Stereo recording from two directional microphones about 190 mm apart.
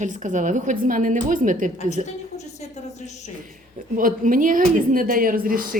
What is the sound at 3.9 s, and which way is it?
A woman's voice, 45° right (ahead or behind).